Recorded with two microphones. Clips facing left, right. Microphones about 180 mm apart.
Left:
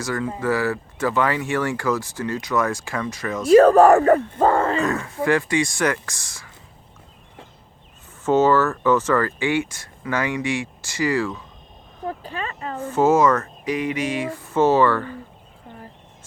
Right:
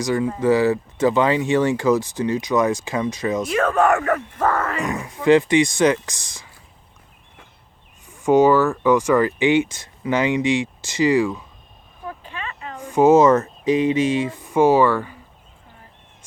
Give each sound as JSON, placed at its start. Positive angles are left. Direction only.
{"t": 0.0, "sound": "speech", "side_deg": -15}
{"t": 3.5, "sound": "speech", "side_deg": 35}
{"t": 5.2, "sound": "speech", "side_deg": -20}
{"t": 8.2, "sound": "speech", "side_deg": -15}
{"t": 12.0, "sound": "a sound", "side_deg": 40}
{"t": 12.8, "sound": "speech", "side_deg": -15}